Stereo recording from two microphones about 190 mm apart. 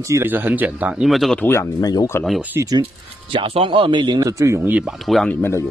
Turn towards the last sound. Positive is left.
turn(degrees=10)  # may be behind; listen again after turning